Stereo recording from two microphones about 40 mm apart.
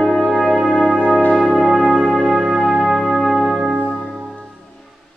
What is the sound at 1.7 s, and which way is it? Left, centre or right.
Music, centre.